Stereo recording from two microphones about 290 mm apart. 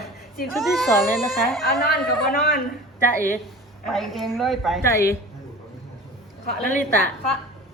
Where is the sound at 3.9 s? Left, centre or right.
Centre.